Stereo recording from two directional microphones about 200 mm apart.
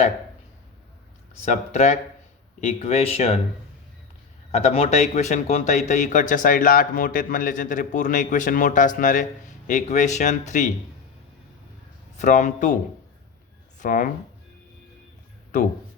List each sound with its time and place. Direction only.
1.5 s speech: 35° left (ahead or behind)
4.5 s speech: 30° left (ahead or behind)
12.1 s speech: 40° left (ahead or behind)
13.7 s speech: 40° left (ahead or behind)